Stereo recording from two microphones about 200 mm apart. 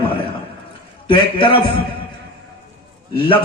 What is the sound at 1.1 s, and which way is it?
Speech, 25° left (ahead or behind).